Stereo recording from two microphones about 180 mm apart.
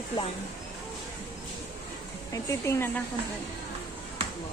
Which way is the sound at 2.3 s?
15° left (ahead or behind).